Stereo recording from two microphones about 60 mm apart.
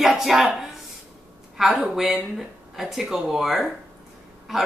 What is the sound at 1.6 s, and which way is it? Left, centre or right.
A woman's voice, centre.